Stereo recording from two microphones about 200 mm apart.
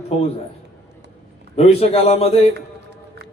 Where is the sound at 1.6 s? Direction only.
30° left (ahead or behind).